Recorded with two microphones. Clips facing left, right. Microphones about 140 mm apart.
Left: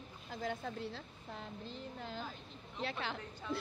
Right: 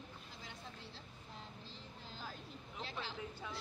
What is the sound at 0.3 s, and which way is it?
Speech, 55° left (ahead or behind).